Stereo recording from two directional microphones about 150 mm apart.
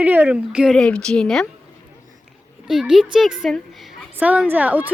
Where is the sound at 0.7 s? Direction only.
5° left (ahead or behind).